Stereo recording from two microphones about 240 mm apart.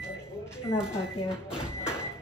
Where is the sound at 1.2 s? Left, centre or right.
Centre.